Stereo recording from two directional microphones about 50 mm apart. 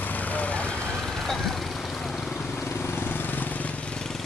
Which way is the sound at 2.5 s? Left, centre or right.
Left.